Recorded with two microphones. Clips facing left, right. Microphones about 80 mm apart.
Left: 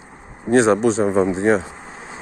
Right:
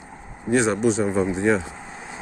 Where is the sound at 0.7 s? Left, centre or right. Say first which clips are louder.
Left 3 dB; left.